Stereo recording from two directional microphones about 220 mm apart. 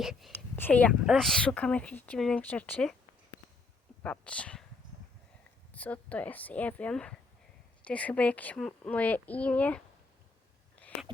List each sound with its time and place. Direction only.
0.0 s speech: centre (ahead or behind)
4.0 s speech: 5° left (ahead or behind)
5.7 s speech: 5° left (ahead or behind)
10.8 s a sound: 5° left (ahead or behind)